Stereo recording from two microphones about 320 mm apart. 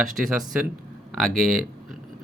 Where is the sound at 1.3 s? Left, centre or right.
Centre.